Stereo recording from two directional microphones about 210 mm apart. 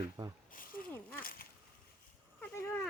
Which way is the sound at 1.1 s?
45° left (ahead or behind).